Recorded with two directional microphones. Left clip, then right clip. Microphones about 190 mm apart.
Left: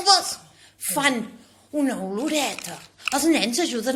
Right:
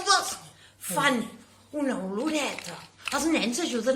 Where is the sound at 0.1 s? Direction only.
30° left (ahead or behind).